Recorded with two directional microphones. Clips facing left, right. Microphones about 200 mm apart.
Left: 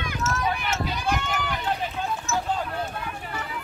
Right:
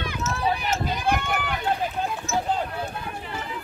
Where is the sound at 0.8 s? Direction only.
50° right (ahead or behind).